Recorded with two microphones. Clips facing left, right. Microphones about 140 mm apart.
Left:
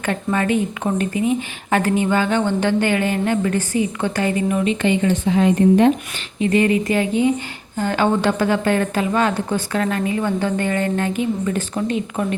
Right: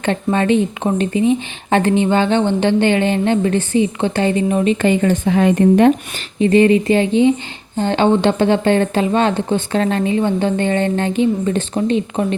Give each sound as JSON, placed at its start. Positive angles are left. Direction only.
{"t": 0.0, "sound": "a woman's voice", "side_deg": -25}
{"t": 6.4, "sound": "speech", "side_deg": -30}